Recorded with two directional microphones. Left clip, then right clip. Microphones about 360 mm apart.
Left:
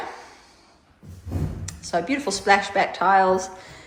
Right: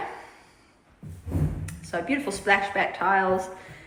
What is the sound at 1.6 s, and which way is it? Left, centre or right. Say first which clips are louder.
A woman's voice: left 6 dB; centre.